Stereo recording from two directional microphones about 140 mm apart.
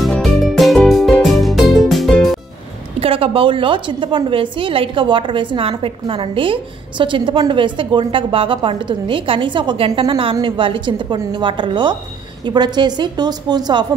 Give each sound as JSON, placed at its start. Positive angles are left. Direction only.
{"t": 0.0, "sound": "music", "side_deg": 0}
{"t": 3.0, "sound": "a woman's voice", "side_deg": -40}